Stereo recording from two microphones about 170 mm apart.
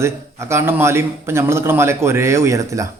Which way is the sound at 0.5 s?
15° right (ahead or behind).